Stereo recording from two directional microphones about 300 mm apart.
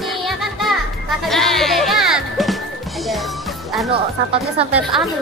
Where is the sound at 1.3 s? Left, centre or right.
Centre.